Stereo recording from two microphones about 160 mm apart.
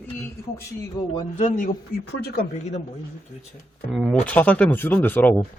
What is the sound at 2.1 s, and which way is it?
Speech, 90° left.